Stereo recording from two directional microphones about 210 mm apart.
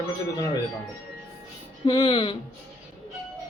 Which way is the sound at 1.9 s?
20° left (ahead or behind).